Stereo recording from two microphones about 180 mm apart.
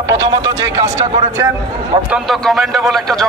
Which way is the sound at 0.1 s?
20° right (ahead or behind).